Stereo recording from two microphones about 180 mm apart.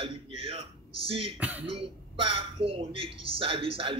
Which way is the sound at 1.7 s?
30° right (ahead or behind).